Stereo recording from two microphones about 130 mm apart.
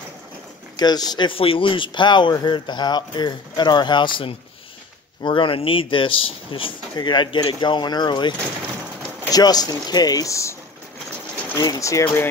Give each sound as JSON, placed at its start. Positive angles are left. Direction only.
{"t": 0.7, "sound": "speech", "side_deg": 30}
{"t": 11.5, "sound": "speech", "side_deg": 30}